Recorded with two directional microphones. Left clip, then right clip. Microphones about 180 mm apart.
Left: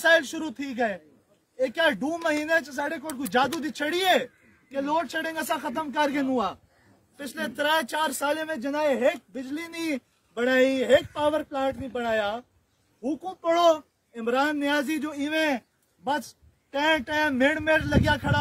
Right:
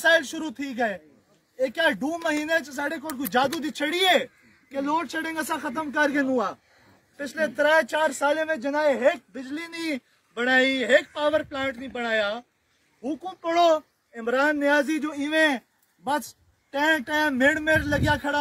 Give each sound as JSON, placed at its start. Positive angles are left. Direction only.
{"t": 0.0, "sound": "speech", "side_deg": 0}
{"t": 4.7, "sound": "speech", "side_deg": 25}
{"t": 13.0, "sound": "speech", "side_deg": 50}
{"t": 15.0, "sound": "speech", "side_deg": 25}
{"t": 16.0, "sound": "speech", "side_deg": 0}